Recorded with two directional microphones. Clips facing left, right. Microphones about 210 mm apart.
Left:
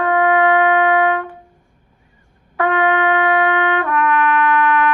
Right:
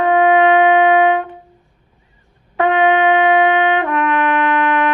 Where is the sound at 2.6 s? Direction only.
20° right (ahead or behind).